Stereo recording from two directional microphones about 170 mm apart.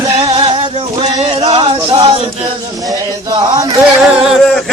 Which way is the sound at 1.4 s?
30° right (ahead or behind).